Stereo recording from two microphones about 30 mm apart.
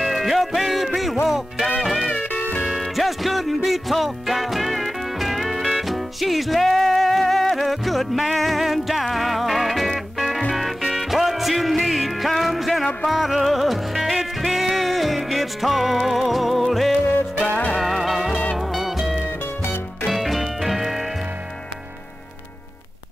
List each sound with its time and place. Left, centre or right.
0.0 s music: centre
18.3 s music: left
18.7 s music: centre